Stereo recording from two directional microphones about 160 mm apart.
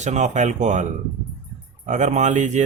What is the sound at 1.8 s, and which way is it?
Speech, 50° right (ahead or behind).